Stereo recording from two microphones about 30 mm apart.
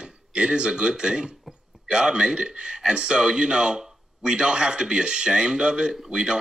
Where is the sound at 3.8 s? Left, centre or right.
Right.